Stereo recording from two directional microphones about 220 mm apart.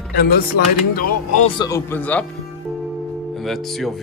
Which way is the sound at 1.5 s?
15° left (ahead or behind).